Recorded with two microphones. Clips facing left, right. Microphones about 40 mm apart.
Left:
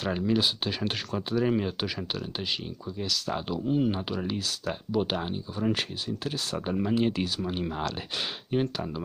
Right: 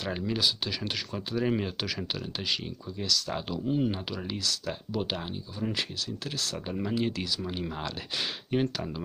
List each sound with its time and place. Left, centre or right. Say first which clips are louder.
0.1 s speech: left 6 dB; centre
0.4 s speech: left 2 dB; left
1.1 s speech: left 3 dB; centre
3.0 s speech: even; centre
8.5 s speech: even; centre